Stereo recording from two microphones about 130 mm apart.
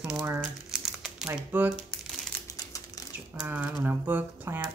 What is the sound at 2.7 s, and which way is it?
Bird, 25° left (ahead or behind).